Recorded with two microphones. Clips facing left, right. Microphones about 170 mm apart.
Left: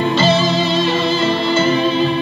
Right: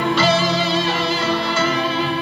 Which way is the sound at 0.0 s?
25° left (ahead or behind).